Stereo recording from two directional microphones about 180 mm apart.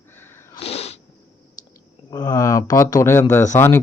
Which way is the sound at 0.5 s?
35° left (ahead or behind).